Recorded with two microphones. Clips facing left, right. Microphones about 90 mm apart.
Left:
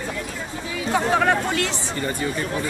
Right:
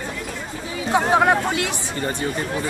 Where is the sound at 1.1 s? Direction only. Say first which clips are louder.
Right 3 dB; 20° right (ahead or behind).